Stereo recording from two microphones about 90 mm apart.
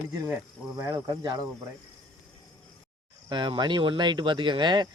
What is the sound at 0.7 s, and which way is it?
Speech, 40° right (ahead or behind).